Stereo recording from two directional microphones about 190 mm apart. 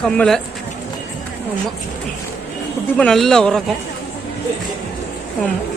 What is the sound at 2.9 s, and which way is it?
Speech, 5° left (ahead or behind).